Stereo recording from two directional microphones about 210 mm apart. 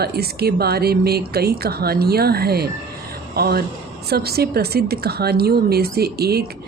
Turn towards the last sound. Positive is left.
turn(degrees=-50)  # may be behind; listen again after turning